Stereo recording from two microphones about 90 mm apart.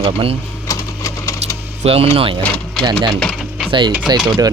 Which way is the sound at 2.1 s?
90° right.